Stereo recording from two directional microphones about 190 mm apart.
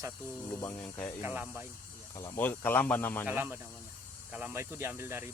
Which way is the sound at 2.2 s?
15° left (ahead or behind).